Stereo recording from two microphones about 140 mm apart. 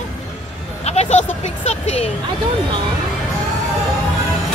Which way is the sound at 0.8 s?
50° left (ahead or behind).